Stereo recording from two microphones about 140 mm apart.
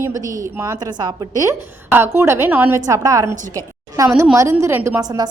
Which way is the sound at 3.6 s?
25° right (ahead or behind).